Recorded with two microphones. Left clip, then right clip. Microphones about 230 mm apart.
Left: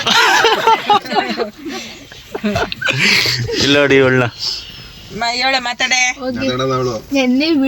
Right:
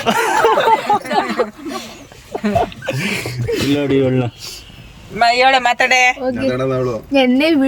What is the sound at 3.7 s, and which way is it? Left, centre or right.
Speech, centre.